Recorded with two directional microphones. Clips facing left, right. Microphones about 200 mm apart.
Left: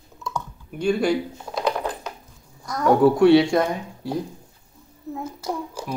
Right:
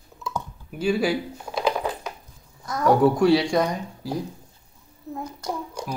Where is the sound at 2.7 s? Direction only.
Centre (ahead or behind).